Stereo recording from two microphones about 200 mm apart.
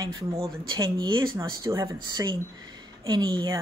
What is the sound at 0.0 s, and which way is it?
Speech, 15° right (ahead or behind).